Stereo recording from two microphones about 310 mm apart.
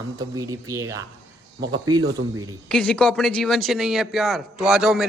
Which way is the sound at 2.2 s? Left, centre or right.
Right.